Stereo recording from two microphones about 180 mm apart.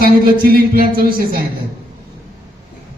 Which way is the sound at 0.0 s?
55° right (ahead or behind).